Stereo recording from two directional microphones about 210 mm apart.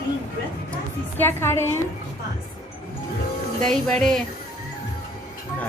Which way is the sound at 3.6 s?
5° left (ahead or behind).